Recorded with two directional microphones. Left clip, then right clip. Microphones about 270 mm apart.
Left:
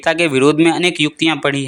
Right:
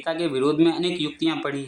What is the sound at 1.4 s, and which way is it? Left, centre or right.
Speech, left.